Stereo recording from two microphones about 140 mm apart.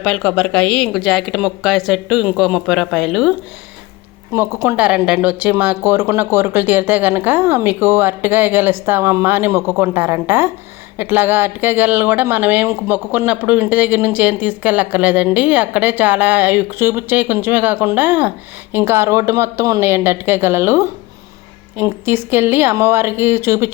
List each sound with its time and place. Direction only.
0.0 s speech: centre (ahead or behind)
4.3 s speech: 20° right (ahead or behind)
4.8 s speech: 10° right (ahead or behind)